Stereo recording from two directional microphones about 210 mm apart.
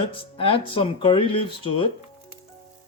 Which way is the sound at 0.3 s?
25° left (ahead or behind).